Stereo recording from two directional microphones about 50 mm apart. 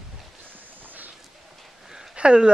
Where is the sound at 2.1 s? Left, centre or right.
Centre.